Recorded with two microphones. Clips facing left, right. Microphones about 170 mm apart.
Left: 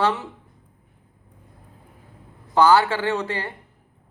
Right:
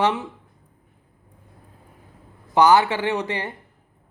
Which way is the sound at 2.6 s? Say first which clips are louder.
Even; 20° right (ahead or behind).